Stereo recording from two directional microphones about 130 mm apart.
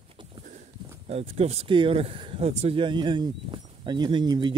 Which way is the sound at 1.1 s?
50° right (ahead or behind).